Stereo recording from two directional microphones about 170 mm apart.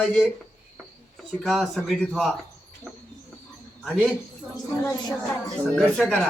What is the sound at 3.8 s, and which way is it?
Speech, 5° left (ahead or behind).